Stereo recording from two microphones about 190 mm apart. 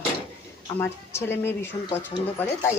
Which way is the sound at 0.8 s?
10° left (ahead or behind).